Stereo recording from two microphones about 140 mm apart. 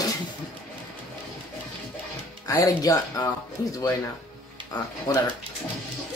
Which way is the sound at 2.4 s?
25° left (ahead or behind).